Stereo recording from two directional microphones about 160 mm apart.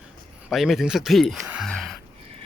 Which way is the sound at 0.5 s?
Centre (ahead or behind).